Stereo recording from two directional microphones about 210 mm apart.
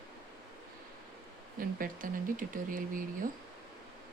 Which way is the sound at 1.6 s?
40° right (ahead or behind).